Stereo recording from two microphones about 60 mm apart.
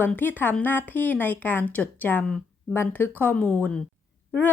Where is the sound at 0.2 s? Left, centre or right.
Left.